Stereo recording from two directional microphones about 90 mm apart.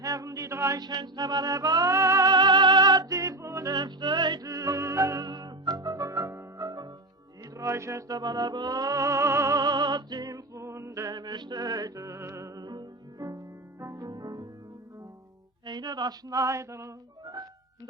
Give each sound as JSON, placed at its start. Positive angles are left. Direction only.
{"t": 0.0, "sound": "a sound", "side_deg": -40}
{"t": 0.8, "sound": "music", "side_deg": -50}
{"t": 2.3, "sound": "music", "side_deg": -55}
{"t": 3.2, "sound": "music", "side_deg": -35}
{"t": 3.8, "sound": "music", "side_deg": -55}
{"t": 4.4, "sound": "music", "side_deg": -40}
{"t": 5.2, "sound": "music", "side_deg": -45}
{"t": 7.5, "sound": "music", "side_deg": -35}
{"t": 11.1, "sound": "music", "side_deg": -50}
{"t": 14.1, "sound": "music", "side_deg": -45}
{"t": 15.6, "sound": "music", "side_deg": -50}